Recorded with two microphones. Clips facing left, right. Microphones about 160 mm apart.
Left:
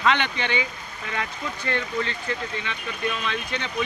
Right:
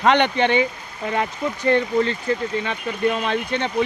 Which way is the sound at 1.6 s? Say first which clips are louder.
Right 9 dB; 35° right (ahead or behind).